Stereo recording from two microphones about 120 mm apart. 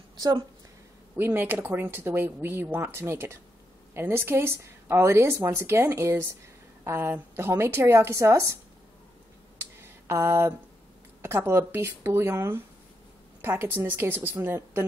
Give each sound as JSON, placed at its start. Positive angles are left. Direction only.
{"t": 1.1, "sound": "speech", "side_deg": -15}
{"t": 9.6, "sound": "a sound", "side_deg": -20}
{"t": 11.2, "sound": "a woman's voice", "side_deg": -20}